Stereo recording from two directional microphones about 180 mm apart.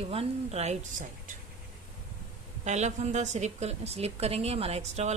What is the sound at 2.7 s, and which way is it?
A woman's voice, 40° right (ahead or behind).